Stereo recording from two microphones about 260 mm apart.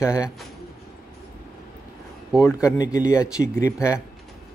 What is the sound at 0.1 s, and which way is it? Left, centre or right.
Speech, centre.